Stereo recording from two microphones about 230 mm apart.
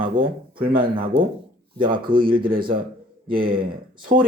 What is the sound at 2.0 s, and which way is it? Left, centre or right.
Speech, right.